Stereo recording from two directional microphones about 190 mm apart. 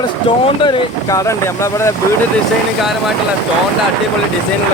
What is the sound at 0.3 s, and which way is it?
Speech, 25° left (ahead or behind).